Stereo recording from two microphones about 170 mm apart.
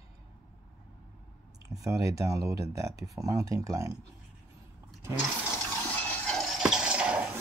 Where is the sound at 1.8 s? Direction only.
20° right (ahead or behind).